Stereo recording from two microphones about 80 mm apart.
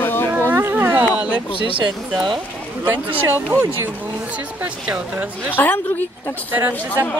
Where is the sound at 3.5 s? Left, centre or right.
Right.